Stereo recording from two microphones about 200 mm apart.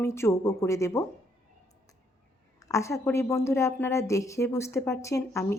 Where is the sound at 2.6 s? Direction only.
15° left (ahead or behind).